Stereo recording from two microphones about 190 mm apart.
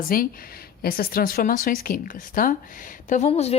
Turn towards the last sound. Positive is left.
turn(degrees=35)  # may be behind; listen again after turning